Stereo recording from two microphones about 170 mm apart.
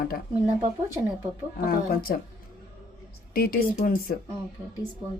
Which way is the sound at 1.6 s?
60° left (ahead or behind).